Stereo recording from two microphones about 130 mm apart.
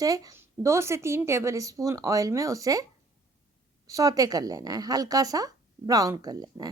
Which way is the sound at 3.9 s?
25° right (ahead or behind).